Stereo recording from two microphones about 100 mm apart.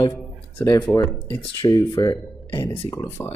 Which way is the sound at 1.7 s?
40° left (ahead or behind).